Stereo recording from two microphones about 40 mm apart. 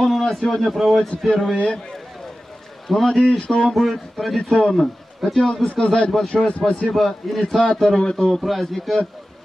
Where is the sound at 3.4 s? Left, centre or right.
Left.